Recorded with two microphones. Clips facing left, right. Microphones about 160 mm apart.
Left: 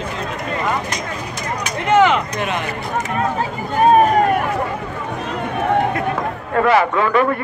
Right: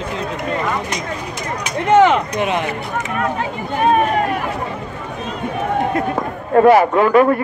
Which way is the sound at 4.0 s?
40° left (ahead or behind).